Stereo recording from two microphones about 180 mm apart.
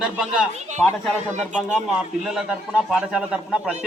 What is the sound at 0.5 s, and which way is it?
Speech, 40° right (ahead or behind).